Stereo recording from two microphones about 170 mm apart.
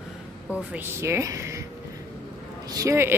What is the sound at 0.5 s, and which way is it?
Speech, 10° right (ahead or behind).